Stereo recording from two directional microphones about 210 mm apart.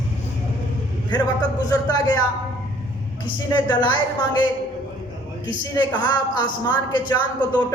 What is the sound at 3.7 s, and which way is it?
Speech, 20° left (ahead or behind).